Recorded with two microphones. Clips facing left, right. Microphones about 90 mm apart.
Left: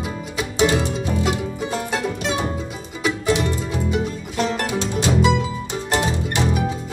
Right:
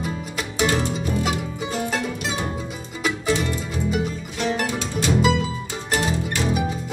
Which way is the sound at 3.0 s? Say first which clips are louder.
Left 2 dB; centre (ahead or behind).